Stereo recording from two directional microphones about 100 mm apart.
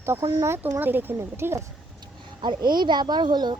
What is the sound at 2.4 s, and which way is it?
Speech, 50° right (ahead or behind).